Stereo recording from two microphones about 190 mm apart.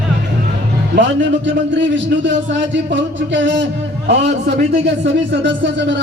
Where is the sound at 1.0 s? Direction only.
70° right (ahead or behind).